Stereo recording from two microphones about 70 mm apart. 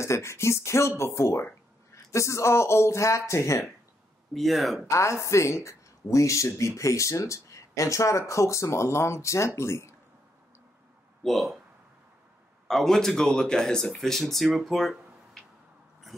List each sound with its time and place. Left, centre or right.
0.0 s speech: left
4.3 s speech: centre
4.8 s speech: left
11.2 s speech: centre
12.6 s speech: centre
16.1 s a sound: centre